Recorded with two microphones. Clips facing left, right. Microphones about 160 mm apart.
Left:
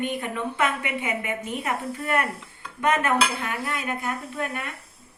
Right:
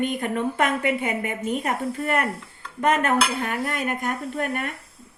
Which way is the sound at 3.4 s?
50° right (ahead or behind).